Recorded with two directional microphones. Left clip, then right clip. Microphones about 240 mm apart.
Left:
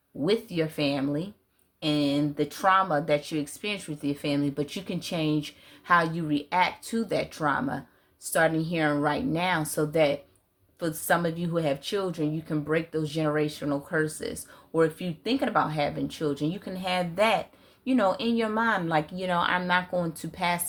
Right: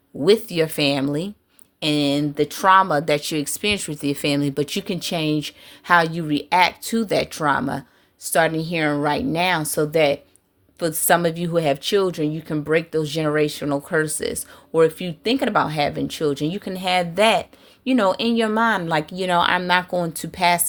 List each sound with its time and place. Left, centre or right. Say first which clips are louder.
0.3 s speech: right 9 dB; right